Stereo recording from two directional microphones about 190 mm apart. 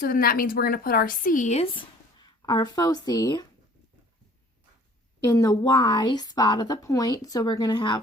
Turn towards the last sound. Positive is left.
turn(degrees=25)  # may be behind; listen again after turning